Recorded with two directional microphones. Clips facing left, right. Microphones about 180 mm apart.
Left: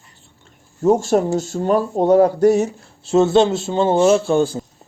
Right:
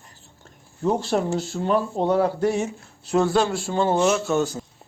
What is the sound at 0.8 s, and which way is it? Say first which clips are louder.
A man's voice: left 7 dB; 45° left (ahead or behind).